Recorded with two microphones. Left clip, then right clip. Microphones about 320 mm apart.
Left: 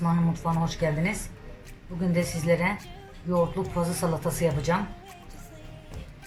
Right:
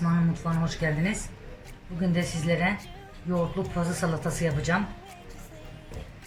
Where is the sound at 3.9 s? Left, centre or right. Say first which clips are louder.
Left 1 dB; centre.